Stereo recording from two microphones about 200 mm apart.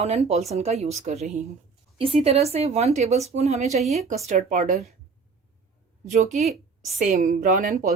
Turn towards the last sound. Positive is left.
turn(degrees=-40)  # may be behind; listen again after turning